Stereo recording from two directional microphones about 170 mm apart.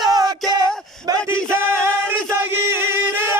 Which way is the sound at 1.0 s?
15° right (ahead or behind).